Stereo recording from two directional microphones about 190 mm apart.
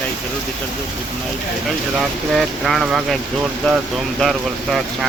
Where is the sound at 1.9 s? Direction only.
Centre (ahead or behind).